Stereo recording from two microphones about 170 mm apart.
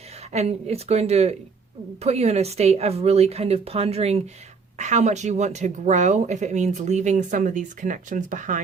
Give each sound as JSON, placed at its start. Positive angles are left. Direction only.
{"t": 0.3, "sound": "a woman's voice", "side_deg": -40}